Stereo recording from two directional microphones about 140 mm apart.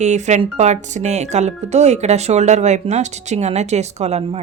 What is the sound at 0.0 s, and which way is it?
Speech, 55° right (ahead or behind).